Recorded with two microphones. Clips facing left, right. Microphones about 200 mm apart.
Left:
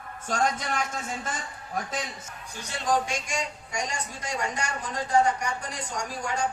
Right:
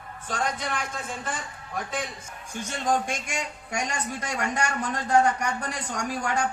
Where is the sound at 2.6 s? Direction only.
50° right (ahead or behind).